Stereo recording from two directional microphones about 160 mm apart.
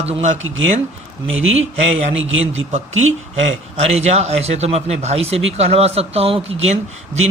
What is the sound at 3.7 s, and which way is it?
Speech, 40° right (ahead or behind).